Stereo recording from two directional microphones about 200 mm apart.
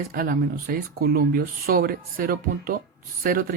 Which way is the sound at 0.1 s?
45° right (ahead or behind).